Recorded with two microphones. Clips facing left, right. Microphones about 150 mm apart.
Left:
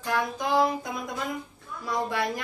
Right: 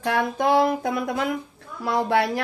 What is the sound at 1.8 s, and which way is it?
Speech, 80° right.